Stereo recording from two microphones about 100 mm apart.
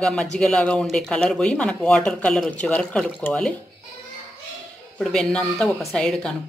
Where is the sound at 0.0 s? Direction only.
5° left (ahead or behind).